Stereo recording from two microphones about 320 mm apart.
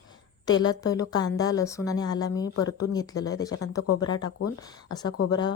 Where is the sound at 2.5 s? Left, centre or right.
Left.